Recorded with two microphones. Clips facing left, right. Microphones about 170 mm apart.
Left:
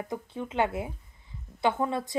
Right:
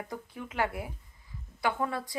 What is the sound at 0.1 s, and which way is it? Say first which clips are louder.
A woman's voice: left 6 dB; 25° left (ahead or behind).